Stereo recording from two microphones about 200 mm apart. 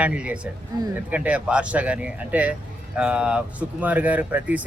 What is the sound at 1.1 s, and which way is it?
A man's voice, 5° right (ahead or behind).